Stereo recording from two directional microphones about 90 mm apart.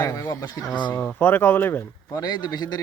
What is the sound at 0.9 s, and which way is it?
Speech, 15° left (ahead or behind).